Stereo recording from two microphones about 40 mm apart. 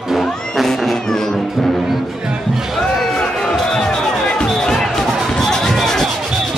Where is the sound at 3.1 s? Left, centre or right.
Centre.